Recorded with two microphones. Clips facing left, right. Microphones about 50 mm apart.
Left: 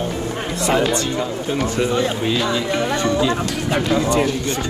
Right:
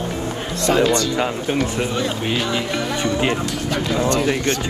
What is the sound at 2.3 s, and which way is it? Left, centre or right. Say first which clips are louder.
Speech: left 2 dB; right.